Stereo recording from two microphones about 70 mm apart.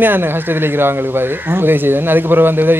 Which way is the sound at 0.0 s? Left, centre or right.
Right.